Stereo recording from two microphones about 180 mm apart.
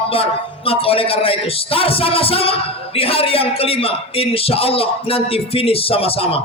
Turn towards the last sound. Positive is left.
turn(degrees=30)  # may be behind; listen again after turning